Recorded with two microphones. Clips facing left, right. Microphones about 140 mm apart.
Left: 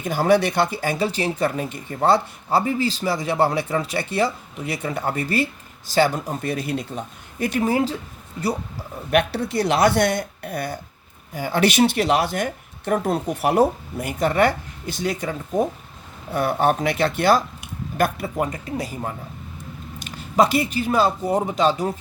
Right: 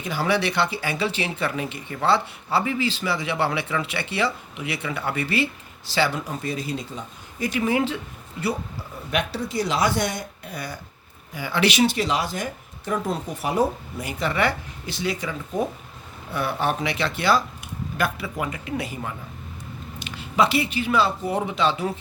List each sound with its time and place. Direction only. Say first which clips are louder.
0.0 s speech: left 5 dB; 45° left (ahead or behind)
7.6 s speech: left 1 dB; 40° left (ahead or behind)
9.0 s a man's voice: left 6 dB; 60° left (ahead or behind); by 21.8 s 40° left (ahead or behind)